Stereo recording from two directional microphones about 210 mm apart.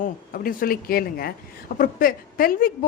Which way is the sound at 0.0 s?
45° left (ahead or behind).